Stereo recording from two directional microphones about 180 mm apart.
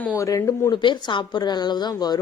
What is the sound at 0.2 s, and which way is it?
Speech, 15° left (ahead or behind).